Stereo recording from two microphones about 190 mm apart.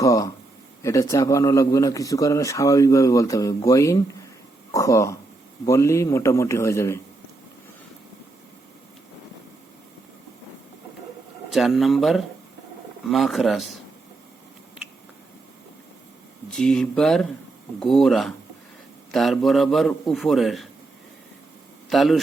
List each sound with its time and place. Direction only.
0.0 s a man's voice: 15° left (ahead or behind)
11.5 s a man's voice: centre (ahead or behind)
16.5 s a man's voice: 5° left (ahead or behind)
21.8 s speech: centre (ahead or behind)